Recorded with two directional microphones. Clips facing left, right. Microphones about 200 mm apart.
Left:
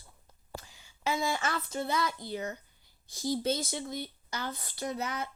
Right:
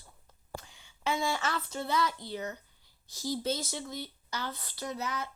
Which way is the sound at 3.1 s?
55° left (ahead or behind).